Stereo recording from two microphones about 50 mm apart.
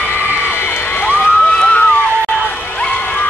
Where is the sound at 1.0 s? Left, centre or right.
Left.